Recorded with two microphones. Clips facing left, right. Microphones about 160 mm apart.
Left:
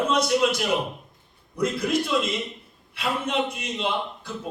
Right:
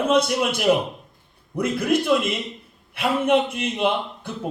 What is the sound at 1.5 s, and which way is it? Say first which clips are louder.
A man's voice: right 3 dB; 55° right (ahead or behind).